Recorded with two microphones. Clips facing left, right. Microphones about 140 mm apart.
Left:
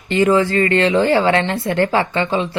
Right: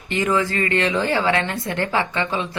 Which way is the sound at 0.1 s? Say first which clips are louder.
Left 7 dB; 30° left (ahead or behind).